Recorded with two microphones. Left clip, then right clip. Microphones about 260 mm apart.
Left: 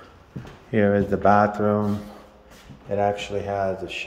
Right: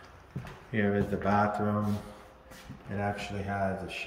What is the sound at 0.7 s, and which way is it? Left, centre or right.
Speech, centre.